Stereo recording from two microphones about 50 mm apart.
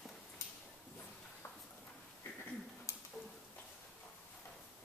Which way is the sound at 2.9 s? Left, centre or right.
Left.